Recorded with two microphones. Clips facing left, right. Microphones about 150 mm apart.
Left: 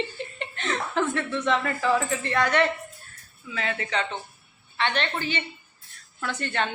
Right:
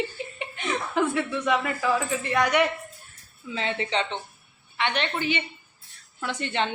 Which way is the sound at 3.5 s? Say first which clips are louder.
Right 1 dB; 25° right (ahead or behind).